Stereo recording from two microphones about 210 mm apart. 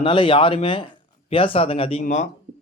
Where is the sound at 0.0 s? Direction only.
25° left (ahead or behind).